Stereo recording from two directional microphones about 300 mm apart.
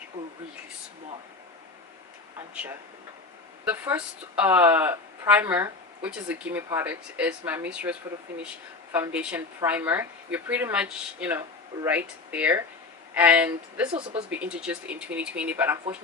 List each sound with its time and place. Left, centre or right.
3.7 s speech: centre
13.9 s speech: centre
14.3 s speech: centre